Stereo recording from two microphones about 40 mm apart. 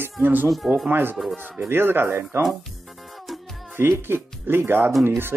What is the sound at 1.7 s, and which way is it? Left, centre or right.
Speech, right.